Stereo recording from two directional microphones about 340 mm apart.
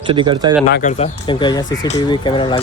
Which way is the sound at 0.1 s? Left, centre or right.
Centre.